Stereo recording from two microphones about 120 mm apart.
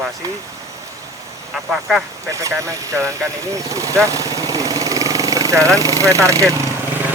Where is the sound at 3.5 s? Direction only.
25° right (ahead or behind).